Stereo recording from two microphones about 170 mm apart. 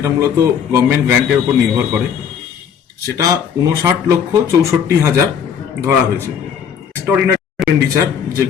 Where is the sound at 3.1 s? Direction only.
20° right (ahead or behind).